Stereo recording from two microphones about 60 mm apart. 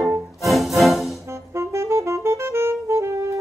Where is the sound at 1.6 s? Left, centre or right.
Right.